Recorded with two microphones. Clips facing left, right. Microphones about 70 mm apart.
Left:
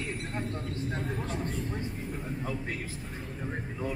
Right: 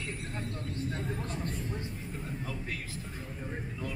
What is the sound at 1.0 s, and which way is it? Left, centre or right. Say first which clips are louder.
Speech: left 3 dB; centre.